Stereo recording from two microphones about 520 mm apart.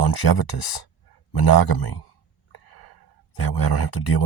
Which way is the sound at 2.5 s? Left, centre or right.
Left.